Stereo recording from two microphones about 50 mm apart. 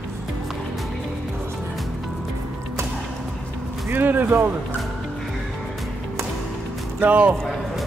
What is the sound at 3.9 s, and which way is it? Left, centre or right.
Speech, right.